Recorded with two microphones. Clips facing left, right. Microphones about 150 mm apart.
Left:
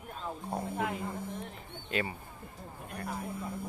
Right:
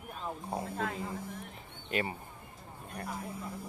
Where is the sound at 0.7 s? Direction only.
15° left (ahead or behind).